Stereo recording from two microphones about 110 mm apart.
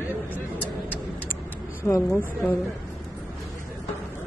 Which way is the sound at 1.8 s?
25° left (ahead or behind).